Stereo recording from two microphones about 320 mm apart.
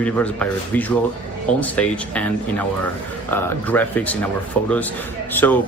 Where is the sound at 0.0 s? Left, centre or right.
Centre.